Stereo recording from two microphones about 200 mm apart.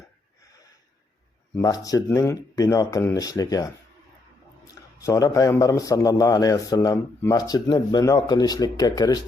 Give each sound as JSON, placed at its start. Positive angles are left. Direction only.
{"t": 1.5, "sound": "speech", "side_deg": 15}
{"t": 4.9, "sound": "a man's voice", "side_deg": 15}